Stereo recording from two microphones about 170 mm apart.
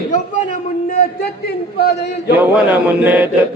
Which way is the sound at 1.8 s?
75° left (ahead or behind).